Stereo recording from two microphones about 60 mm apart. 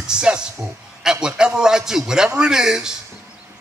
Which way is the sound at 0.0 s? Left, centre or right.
Centre.